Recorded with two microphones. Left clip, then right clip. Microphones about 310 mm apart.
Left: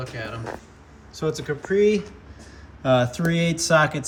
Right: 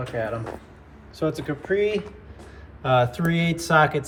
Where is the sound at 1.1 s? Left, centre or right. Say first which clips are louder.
Even; centre.